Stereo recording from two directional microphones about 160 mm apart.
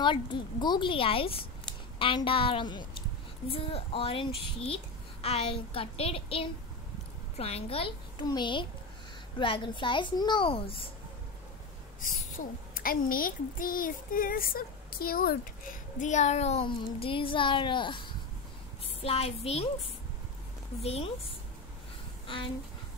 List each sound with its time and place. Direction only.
0.0 s a woman's voice: 30° left (ahead or behind)
12.7 s a woman's voice: 60° left (ahead or behind); by 19.6 s 40° left (ahead or behind)
20.8 s a woman's voice: 40° left (ahead or behind)